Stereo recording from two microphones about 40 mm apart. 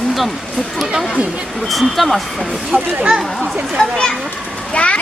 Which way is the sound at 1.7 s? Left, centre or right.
Centre.